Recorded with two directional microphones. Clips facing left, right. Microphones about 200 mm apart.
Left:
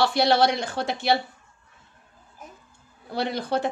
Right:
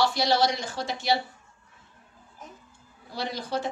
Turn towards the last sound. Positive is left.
turn(degrees=60)  # may be behind; listen again after turning